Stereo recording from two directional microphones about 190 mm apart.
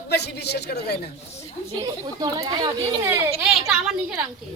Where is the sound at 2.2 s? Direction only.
20° right (ahead or behind).